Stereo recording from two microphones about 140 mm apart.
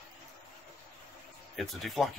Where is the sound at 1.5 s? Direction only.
Centre (ahead or behind).